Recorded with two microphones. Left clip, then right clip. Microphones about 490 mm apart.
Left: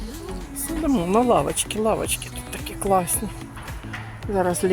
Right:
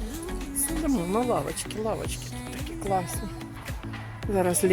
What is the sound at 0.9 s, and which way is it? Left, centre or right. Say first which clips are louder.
Speech: left 9 dB; right.